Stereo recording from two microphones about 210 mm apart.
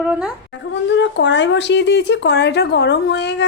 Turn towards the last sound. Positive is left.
turn(degrees=55)  # may be behind; listen again after turning